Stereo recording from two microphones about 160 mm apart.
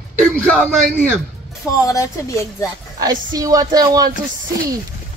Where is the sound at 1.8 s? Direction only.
20° left (ahead or behind).